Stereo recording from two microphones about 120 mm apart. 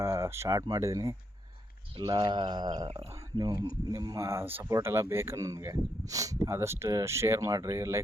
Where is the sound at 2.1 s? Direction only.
40° right (ahead or behind).